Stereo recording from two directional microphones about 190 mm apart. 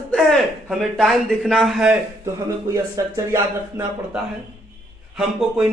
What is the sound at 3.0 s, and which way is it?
Speech, 20° right (ahead or behind).